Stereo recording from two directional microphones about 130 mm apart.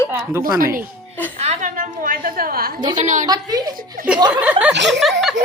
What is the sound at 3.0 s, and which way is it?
Speech, 70° right (ahead or behind).